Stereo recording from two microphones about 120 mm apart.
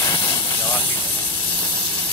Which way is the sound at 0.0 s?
30° left (ahead or behind).